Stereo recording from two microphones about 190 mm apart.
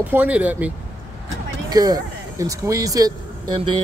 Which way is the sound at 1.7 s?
20° right (ahead or behind).